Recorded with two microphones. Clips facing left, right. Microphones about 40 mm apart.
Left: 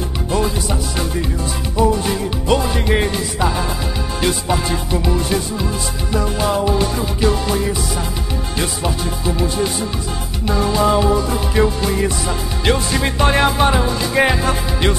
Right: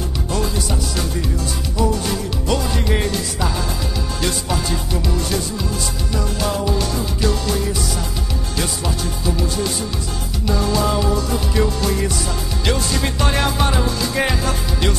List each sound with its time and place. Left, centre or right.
0.3 s music: left